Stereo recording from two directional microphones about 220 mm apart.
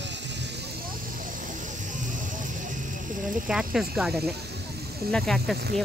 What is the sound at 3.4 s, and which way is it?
Speech, centre (ahead or behind).